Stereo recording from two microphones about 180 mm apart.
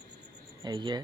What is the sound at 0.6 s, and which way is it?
Speech, 25° right (ahead or behind).